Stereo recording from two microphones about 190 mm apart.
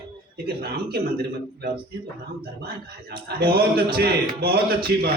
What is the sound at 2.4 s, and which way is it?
A man's voice, 55° right (ahead or behind).